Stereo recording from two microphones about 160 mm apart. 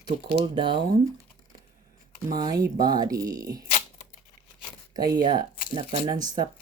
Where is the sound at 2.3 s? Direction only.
25° right (ahead or behind).